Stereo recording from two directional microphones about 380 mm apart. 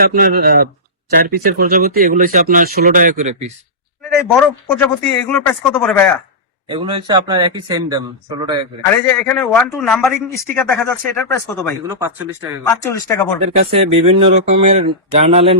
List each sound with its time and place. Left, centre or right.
0.0 s speech: right
4.4 s speech: centre
6.7 s speech: centre
9.0 s speech: centre
11.9 s speech: centre
12.6 s speech: centre
13.7 s speech: centre